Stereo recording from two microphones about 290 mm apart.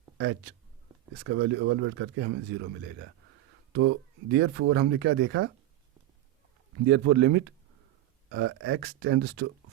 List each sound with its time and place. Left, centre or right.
1.2 s speech: right
3.7 s speech: right
6.8 s speech: right